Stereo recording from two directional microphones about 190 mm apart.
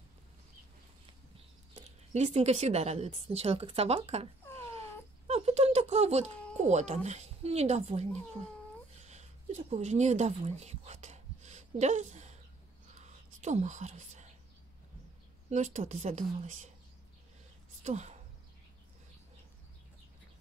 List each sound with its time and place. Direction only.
1.8 s a woman's voice: 35° right (ahead or behind)
5.2 s a sound: 35° right (ahead or behind)
6.6 s a woman's voice: 35° right (ahead or behind)
9.0 s a sound: 35° right (ahead or behind)
13.0 s whispering: 35° right (ahead or behind)
15.5 s a woman's voice: 40° right (ahead or behind)
17.8 s a woman's voice: 35° right (ahead or behind)